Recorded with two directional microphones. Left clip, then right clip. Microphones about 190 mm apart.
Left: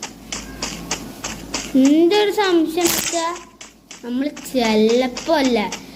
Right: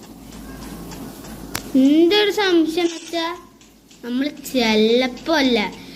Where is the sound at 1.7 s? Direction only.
Centre (ahead or behind).